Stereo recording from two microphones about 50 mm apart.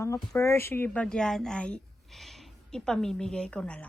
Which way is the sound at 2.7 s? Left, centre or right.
Centre.